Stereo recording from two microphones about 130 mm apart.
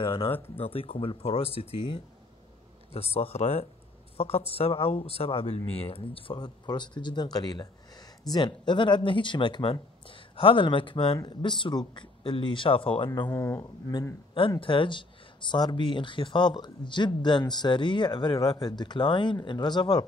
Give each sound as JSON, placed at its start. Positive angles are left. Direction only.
{"t": 0.0, "sound": "speech", "side_deg": 45}
{"t": 13.3, "sound": "speech", "side_deg": 25}
{"t": 14.6, "sound": "speech", "side_deg": 40}